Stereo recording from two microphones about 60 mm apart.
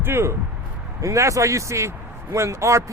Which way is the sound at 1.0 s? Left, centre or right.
Right.